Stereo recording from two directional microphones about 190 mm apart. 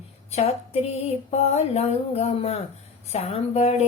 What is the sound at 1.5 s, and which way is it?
Speech, 35° left (ahead or behind).